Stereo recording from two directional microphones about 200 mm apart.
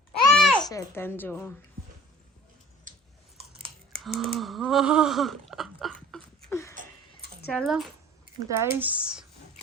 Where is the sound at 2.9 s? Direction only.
40° right (ahead or behind).